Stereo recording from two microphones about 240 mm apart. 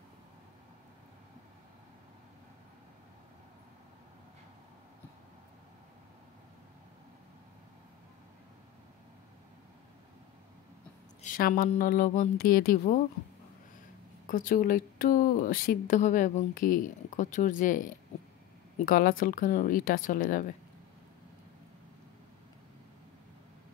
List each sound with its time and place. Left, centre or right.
11.2 s speech: left
14.2 s speech: left